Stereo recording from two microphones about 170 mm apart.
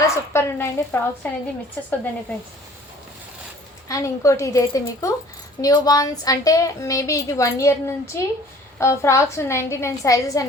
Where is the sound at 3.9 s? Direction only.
15° left (ahead or behind).